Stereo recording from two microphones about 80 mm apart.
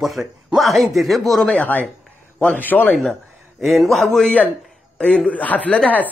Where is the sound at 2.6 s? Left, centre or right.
Left.